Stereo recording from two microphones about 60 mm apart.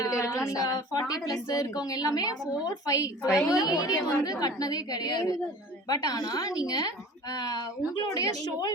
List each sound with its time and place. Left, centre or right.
0.0 s female singing: left
0.3 s a woman's voice: left
2.8 s a woman's voice: left
3.2 s a woman's voice: left
3.6 s a woman's voice: left